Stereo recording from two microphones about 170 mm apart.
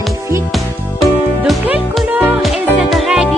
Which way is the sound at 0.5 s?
Centre (ahead or behind).